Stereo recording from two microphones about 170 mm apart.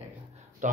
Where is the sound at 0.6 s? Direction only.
45° right (ahead or behind).